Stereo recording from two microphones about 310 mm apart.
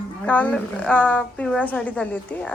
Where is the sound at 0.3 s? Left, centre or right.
Centre.